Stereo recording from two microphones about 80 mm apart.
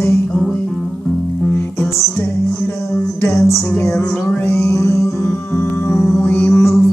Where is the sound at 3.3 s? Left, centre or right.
Left.